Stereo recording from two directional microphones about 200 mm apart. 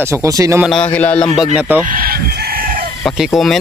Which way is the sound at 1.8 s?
45° right (ahead or behind).